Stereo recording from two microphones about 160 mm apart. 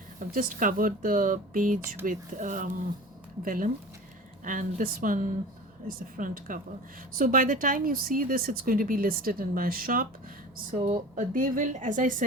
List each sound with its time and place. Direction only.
0.2 s speech: 60° right (ahead or behind)
10.8 s a woman's voice: 35° right (ahead or behind)
11.1 s speech: 60° right (ahead or behind)